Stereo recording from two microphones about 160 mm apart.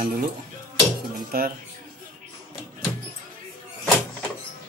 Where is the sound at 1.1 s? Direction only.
65° right (ahead or behind).